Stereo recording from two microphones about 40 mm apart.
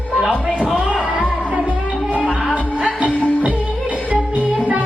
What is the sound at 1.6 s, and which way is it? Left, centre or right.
Music, right.